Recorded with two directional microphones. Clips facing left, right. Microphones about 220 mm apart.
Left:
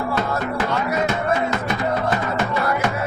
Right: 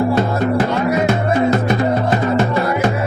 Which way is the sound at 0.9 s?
35° right (ahead or behind).